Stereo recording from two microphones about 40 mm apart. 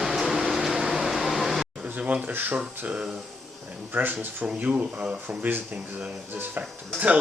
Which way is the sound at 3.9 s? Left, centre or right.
Right.